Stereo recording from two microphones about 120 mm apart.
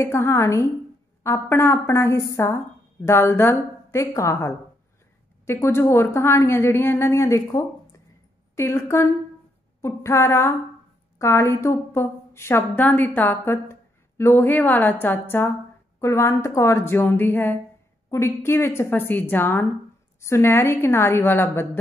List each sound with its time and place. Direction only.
0.0 s a woman's voice: 20° left (ahead or behind)